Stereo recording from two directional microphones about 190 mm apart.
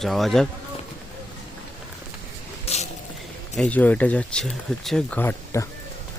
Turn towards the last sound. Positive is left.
turn(degrees=15)  # may be behind; listen again after turning